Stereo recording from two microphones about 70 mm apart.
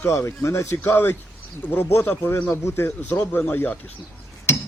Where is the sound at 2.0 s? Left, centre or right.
Left.